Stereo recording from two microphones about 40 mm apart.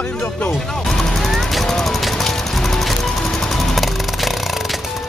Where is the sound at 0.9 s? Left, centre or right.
Centre.